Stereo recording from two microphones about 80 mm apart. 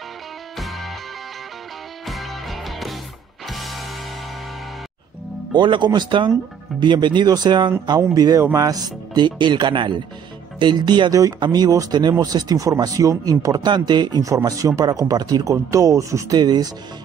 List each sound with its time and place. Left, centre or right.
0.6 s music: centre
2.0 s music: centre
5.5 s speech: right
7.2 s speech: right
14.2 s speech: right
15.5 s speech: right
16.3 s speech: right